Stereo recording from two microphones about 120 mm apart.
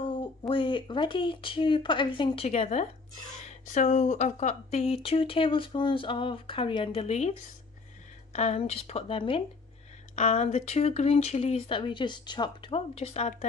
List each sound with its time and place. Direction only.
0.0 s speech: 45° left (ahead or behind); by 2.9 s 70° left (ahead or behind)
3.4 s speech: 90° left; by 7.1 s 45° left (ahead or behind)
7.1 s speech: 70° left (ahead or behind); by 9.4 s 50° left (ahead or behind)
10.1 s speech: 70° left (ahead or behind)
11.8 s speech: 40° left (ahead or behind); by 13.5 s 65° left (ahead or behind)